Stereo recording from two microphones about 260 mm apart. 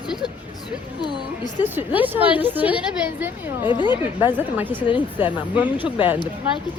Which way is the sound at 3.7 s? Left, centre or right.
Centre.